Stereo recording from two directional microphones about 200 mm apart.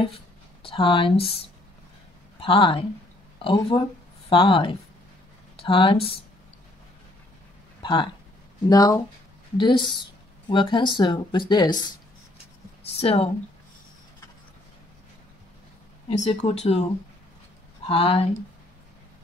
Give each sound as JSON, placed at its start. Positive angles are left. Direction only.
{"t": 0.0, "sound": "a sound", "side_deg": 25}
{"t": 2.4, "sound": "speech", "side_deg": 25}
{"t": 7.8, "sound": "speech", "side_deg": 25}
{"t": 13.0, "sound": "speech", "side_deg": 30}
{"t": 16.1, "sound": "speech", "side_deg": 30}
{"t": 17.8, "sound": "speech", "side_deg": 30}